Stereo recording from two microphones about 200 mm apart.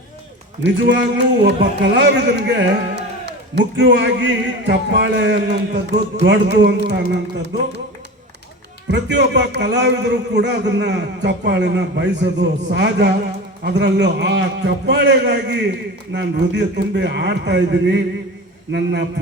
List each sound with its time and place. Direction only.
0.6 s a man's voice: 60° right (ahead or behind)
8.9 s a man's voice: 60° right (ahead or behind)